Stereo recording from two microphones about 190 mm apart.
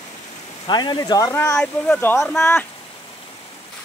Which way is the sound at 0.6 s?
20° left (ahead or behind).